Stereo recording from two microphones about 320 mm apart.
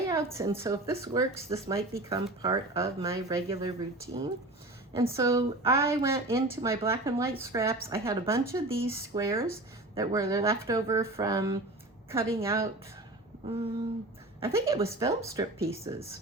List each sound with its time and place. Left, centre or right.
0.1 s a woman's voice: centre
13.4 s a sound: centre
14.4 s a woman's voice: centre
16.0 s speech: left